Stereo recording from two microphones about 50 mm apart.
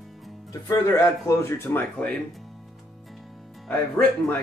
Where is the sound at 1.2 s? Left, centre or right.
Left.